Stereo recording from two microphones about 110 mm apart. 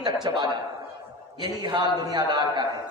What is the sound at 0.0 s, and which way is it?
A man's voice, 40° right (ahead or behind).